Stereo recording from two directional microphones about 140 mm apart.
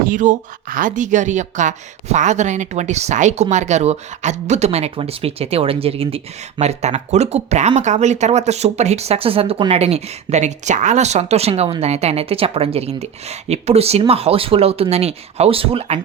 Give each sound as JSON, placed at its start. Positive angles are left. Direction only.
{"t": 0.0, "sound": "speech", "side_deg": -65}